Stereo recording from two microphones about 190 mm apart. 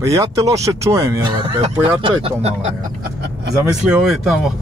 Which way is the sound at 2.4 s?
35° right (ahead or behind).